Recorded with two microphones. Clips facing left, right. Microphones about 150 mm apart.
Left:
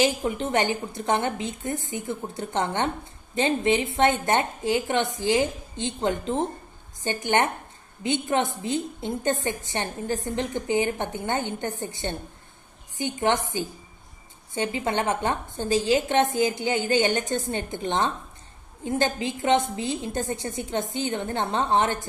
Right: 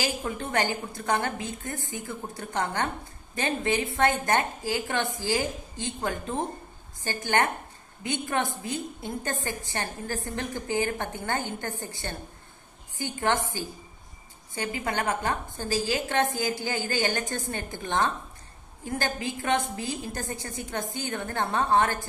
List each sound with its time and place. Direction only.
0.0 s a woman's voice: 20° left (ahead or behind)